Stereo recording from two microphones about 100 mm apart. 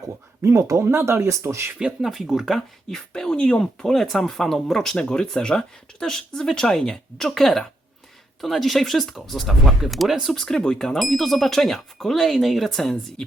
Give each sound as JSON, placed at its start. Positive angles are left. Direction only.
{"t": 0.4, "sound": "speech", "side_deg": -25}
{"t": 1.8, "sound": "speech", "side_deg": -5}